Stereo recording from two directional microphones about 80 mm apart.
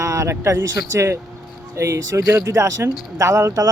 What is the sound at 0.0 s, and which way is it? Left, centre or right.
Speech, right.